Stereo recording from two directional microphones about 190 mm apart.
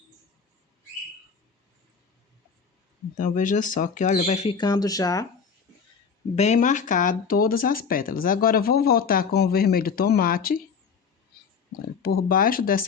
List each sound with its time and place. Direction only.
3.2 s speech: 45° left (ahead or behind)
4.5 s speech: 20° left (ahead or behind)
6.3 s speech: 40° left (ahead or behind)
12.0 s speech: 50° left (ahead or behind)